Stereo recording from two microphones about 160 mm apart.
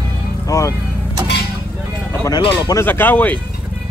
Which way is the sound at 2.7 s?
15° left (ahead or behind).